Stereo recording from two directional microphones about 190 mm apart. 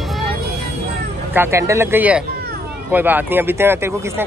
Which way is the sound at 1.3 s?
15° right (ahead or behind).